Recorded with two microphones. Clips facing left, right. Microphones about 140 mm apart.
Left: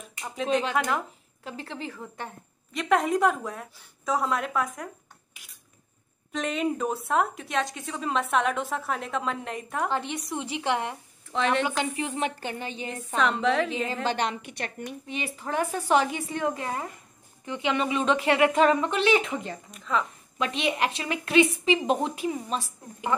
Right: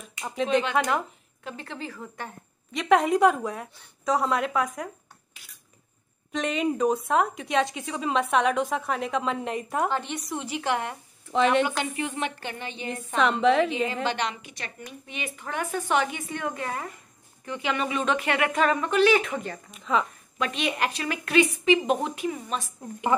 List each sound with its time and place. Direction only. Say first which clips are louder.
0.2 s a woman's voice: right 2 dB; centre (ahead or behind)
1.4 s speech: even; 25° left (ahead or behind)
2.7 s a woman's voice: right 3 dB; centre (ahead or behind)
6.3 s a woman's voice: right 1 dB; centre (ahead or behind)
10.4 s speech: even; 25° left (ahead or behind)
11.3 s a woman's voice: right 4 dB; 5° right (ahead or behind)
11.6 s a woman's voice: even; 30° left (ahead or behind)
13.2 s a woman's voice: right 3 dB; centre (ahead or behind)
14.0 s a woman's voice: left 1 dB; 50° left (ahead or behind)
15.0 s a woman's voice: left 2 dB; 30° left (ahead or behind)
19.7 s a woman's voice: right 2 dB; 5° right (ahead or behind)
20.3 s speech: left 1 dB; 25° left (ahead or behind)